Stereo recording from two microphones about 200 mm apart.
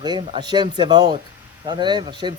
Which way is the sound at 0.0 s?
20° right (ahead or behind).